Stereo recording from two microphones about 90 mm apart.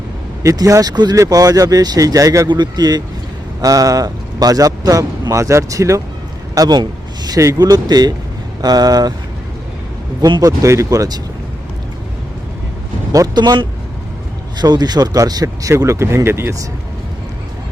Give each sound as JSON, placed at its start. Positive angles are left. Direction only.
{"t": 0.4, "sound": "speech", "side_deg": -40}
{"t": 2.5, "sound": "a man's voice", "side_deg": -50}
{"t": 10.2, "sound": "a man's voice", "side_deg": -50}
{"t": 13.1, "sound": "speech", "side_deg": -50}
{"t": 15.7, "sound": "a man's voice", "side_deg": -30}